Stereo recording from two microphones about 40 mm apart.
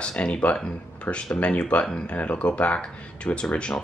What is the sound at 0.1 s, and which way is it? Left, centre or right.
Speech, left.